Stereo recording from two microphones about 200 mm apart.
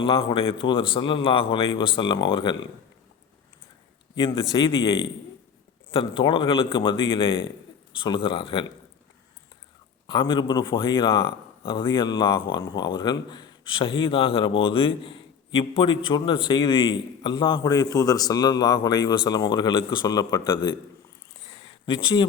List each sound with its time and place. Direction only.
0.0 s speech: 25° left (ahead or behind)
4.1 s speech: 25° left (ahead or behind)
10.1 s speech: 25° left (ahead or behind)
21.4 s a sound: 25° left (ahead or behind)